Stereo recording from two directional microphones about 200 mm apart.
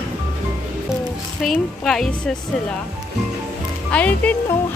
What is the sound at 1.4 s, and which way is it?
Speech, centre (ahead or behind).